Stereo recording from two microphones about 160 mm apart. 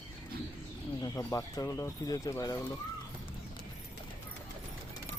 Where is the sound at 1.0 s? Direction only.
20° left (ahead or behind).